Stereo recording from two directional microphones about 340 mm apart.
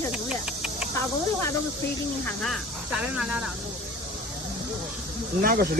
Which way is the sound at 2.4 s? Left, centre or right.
Centre.